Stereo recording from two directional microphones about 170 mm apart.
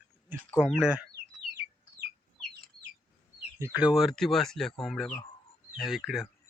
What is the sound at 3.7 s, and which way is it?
Speech, 5° right (ahead or behind).